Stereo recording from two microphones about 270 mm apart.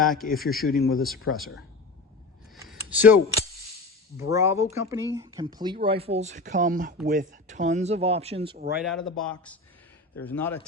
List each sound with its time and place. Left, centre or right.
0.0 s speech: centre
0.6 s speech: left
1.3 s speech: left
2.6 s speech: centre; by 8.5 s right
8.8 s speech: centre